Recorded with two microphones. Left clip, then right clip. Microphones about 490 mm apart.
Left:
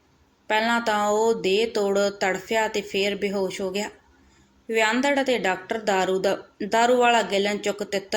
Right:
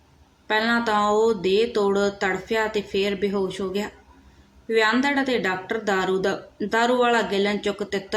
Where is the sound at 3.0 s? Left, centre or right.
Right.